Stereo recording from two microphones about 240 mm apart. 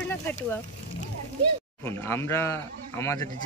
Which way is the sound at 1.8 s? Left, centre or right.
Centre.